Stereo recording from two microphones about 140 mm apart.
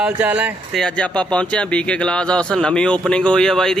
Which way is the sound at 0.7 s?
5° left (ahead or behind).